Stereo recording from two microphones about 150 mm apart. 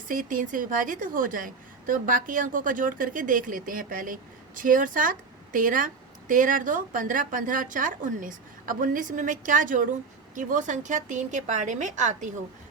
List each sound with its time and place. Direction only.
0.1 s a woman's voice: 65° right (ahead or behind)